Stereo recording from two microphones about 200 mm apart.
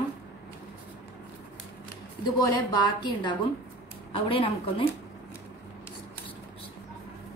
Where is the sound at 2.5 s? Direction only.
20° left (ahead or behind).